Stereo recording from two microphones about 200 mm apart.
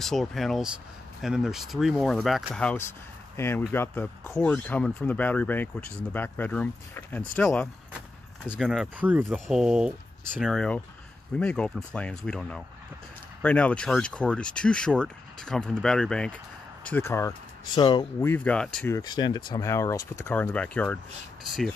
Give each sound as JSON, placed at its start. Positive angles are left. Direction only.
{"t": 0.0, "sound": "speech", "side_deg": 0}
{"t": 18.2, "sound": "speech", "side_deg": 10}
{"t": 18.9, "sound": "speech", "side_deg": 20}